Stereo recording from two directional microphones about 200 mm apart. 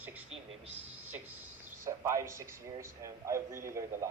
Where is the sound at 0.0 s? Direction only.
10° right (ahead or behind).